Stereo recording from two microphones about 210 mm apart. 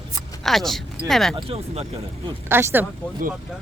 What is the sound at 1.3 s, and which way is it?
Speech, 30° right (ahead or behind).